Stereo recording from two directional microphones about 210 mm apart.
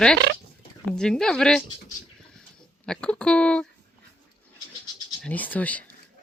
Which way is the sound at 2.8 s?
5° left (ahead or behind).